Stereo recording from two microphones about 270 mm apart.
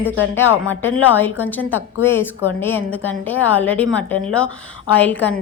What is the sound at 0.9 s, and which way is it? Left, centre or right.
A woman's voice, centre.